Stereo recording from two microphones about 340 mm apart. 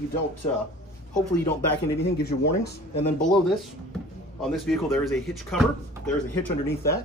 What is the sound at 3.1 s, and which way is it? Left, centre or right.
Speech, centre.